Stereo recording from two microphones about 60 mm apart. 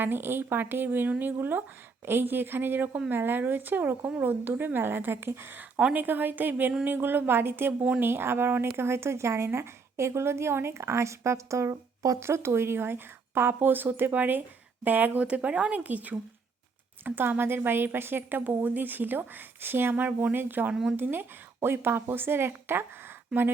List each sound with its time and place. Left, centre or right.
0.0 s speech: right
5.7 s speech: right
17.0 s speech: right